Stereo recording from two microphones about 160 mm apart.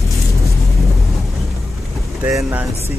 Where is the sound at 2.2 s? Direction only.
10° right (ahead or behind).